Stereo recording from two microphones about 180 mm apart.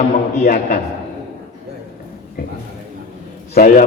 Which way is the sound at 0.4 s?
50° left (ahead or behind).